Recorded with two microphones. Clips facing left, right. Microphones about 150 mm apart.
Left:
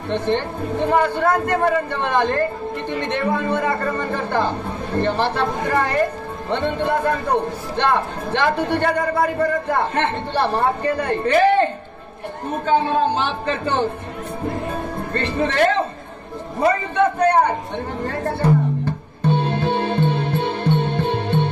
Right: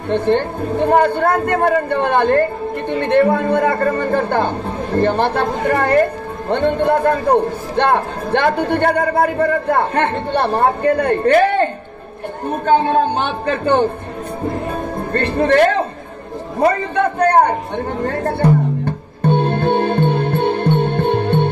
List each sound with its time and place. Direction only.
0.1 s a man's voice: 55° right (ahead or behind)
15.1 s a man's voice: 55° right (ahead or behind)
18.9 s music: 55° right (ahead or behind)